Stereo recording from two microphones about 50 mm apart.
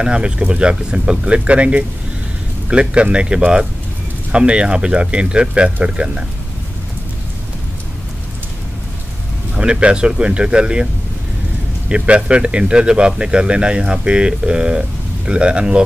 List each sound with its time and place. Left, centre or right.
0.0 s speech: right
9.6 s speech: right
11.9 s speech: right